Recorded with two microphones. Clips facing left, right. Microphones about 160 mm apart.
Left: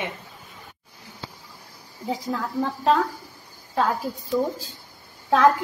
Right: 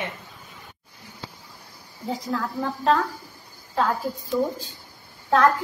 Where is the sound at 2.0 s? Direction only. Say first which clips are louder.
Even; centre (ahead or behind).